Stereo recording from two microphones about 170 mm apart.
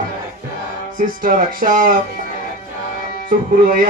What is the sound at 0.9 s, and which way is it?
Speech, 50° right (ahead or behind).